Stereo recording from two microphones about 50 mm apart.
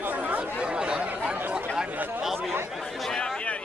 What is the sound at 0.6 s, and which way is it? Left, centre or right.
Chatter, centre.